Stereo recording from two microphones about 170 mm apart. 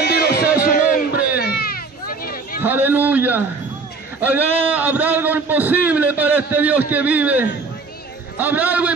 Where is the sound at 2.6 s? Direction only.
10° right (ahead or behind).